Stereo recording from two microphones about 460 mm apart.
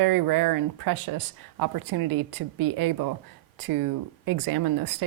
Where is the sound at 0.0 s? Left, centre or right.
Right.